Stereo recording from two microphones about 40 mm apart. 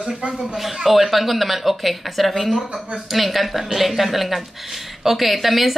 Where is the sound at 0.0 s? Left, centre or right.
Right.